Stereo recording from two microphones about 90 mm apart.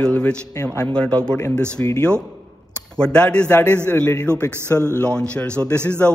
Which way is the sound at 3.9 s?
25° left (ahead or behind).